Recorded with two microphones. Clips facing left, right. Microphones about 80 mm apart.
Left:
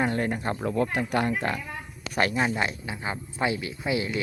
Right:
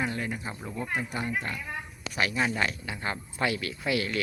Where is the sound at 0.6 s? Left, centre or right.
Left.